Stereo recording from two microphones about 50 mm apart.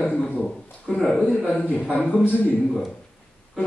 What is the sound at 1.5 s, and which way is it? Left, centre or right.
A man's voice, left.